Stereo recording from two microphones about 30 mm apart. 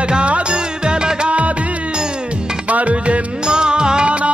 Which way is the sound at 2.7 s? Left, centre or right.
Right.